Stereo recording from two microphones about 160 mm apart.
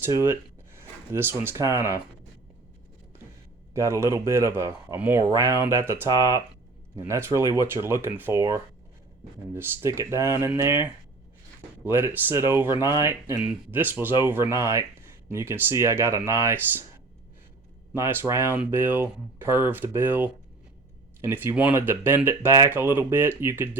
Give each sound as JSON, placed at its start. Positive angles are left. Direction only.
{"t": 0.0, "sound": "speech", "side_deg": -15}
{"t": 3.8, "sound": "speech", "side_deg": -20}
{"t": 11.9, "sound": "speech", "side_deg": -15}
{"t": 17.9, "sound": "speech", "side_deg": -15}